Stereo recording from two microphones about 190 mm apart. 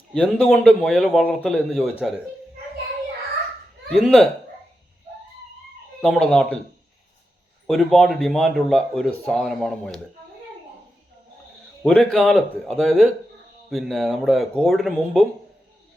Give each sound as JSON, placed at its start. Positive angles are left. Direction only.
{"t": 0.1, "sound": "speech", "side_deg": 5}
{"t": 3.9, "sound": "speech", "side_deg": 0}
{"t": 6.0, "sound": "speech", "side_deg": 0}
{"t": 7.7, "sound": "speech", "side_deg": 0}
{"t": 11.8, "sound": "speech", "side_deg": 0}